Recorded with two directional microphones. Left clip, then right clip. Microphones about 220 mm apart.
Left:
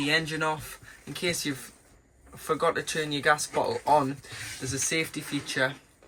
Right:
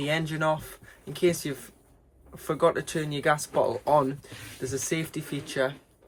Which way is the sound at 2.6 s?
25° right (ahead or behind).